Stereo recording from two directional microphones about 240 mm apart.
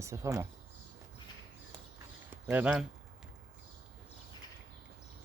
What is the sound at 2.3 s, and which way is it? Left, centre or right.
Speech, centre.